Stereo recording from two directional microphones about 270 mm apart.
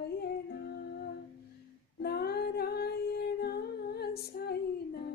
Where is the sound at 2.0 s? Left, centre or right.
Left.